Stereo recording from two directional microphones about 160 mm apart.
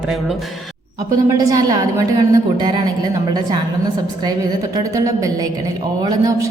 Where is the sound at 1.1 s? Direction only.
20° right (ahead or behind).